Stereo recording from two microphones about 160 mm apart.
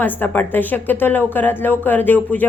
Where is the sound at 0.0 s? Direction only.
10° left (ahead or behind).